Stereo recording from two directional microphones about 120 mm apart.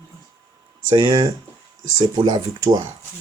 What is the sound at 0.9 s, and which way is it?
Speech, 45° right (ahead or behind).